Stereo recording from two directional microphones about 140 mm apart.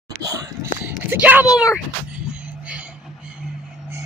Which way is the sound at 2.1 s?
10° right (ahead or behind).